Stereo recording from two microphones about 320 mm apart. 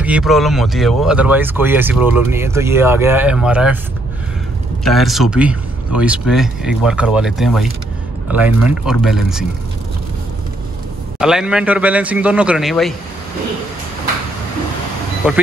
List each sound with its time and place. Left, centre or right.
0.0 s speech: centre
4.8 s speech: centre
11.1 s speech: centre
15.2 s speech: centre